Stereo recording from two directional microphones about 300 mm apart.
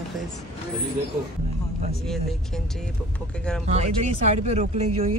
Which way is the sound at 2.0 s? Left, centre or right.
Centre.